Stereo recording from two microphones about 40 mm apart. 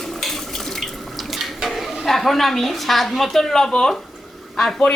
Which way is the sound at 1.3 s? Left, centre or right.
Centre.